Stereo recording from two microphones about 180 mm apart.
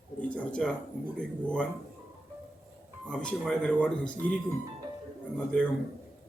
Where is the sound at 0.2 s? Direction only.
5° left (ahead or behind).